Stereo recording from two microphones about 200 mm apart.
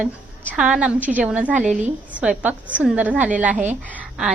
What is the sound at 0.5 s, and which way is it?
A woman's voice, 5° right (ahead or behind).